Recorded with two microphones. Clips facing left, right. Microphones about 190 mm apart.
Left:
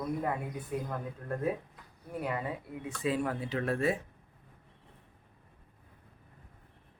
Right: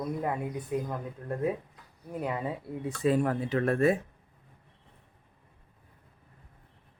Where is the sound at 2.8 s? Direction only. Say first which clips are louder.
Right 6 dB; 45° right (ahead or behind).